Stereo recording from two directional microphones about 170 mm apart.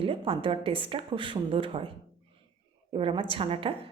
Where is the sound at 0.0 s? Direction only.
35° right (ahead or behind).